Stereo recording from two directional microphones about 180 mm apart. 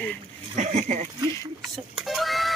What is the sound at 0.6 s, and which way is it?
Speech, 40° right (ahead or behind).